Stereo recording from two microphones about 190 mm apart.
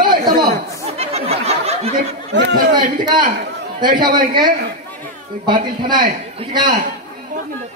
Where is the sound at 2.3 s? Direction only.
65° right (ahead or behind).